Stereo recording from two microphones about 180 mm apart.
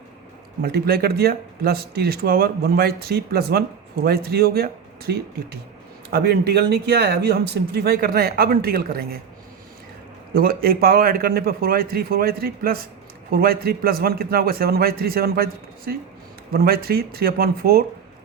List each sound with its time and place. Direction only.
0.6 s speech: 60° right (ahead or behind)
10.3 s speech: 55° right (ahead or behind)